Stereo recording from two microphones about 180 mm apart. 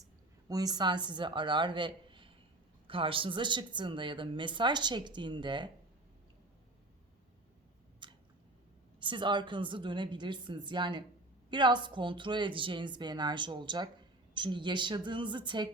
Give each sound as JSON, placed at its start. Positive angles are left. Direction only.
{"t": 0.4, "sound": "speech", "side_deg": -20}
{"t": 8.0, "sound": "chewing", "side_deg": -25}
{"t": 9.0, "sound": "speech", "side_deg": -25}